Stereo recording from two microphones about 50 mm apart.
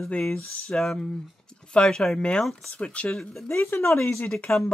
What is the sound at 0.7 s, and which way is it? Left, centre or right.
Speech, centre.